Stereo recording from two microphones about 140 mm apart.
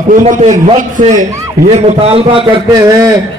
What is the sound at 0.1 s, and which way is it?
Speech, 60° right (ahead or behind).